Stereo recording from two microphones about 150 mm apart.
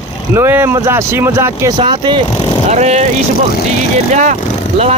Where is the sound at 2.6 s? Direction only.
50° right (ahead or behind).